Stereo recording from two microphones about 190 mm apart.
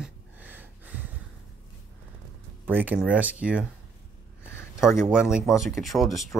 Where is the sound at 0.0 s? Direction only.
10° right (ahead or behind).